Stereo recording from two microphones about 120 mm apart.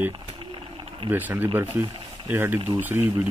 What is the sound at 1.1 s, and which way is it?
Speech, 15° right (ahead or behind).